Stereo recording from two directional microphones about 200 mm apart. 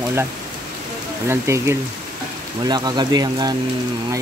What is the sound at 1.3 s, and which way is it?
Speech, 10° right (ahead or behind).